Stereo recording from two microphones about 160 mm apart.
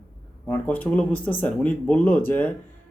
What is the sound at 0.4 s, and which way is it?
Speech, 10° left (ahead or behind).